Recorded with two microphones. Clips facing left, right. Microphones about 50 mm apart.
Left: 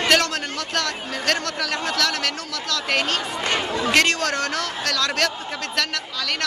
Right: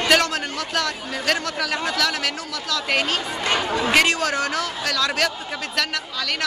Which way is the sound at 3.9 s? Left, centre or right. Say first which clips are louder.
Even; centre.